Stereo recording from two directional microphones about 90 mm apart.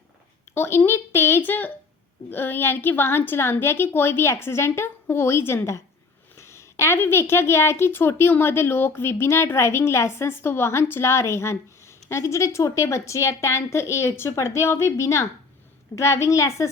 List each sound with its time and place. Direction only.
0.5 s a woman's voice: 30° left (ahead or behind)